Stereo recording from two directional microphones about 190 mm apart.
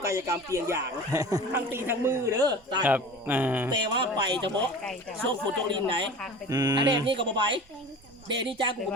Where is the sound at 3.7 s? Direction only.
25° right (ahead or behind).